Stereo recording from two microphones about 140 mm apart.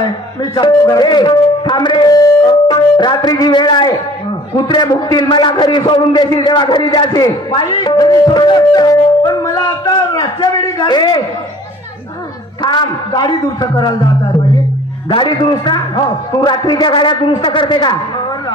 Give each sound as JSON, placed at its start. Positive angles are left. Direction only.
{"t": 0.0, "sound": "a man's voice", "side_deg": 30}
{"t": 2.7, "sound": "music", "side_deg": 30}
{"t": 4.6, "sound": "a man's voice", "side_deg": 30}
{"t": 12.6, "sound": "a man's voice", "side_deg": 30}
{"t": 15.0, "sound": "a man's voice", "side_deg": 35}